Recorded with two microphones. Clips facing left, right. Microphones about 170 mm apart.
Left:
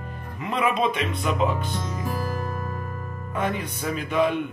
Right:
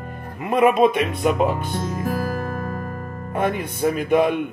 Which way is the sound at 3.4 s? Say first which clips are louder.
Right 6 dB; 55° right (ahead or behind).